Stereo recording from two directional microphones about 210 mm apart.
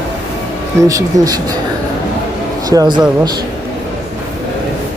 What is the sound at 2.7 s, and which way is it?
Speech, 20° right (ahead or behind).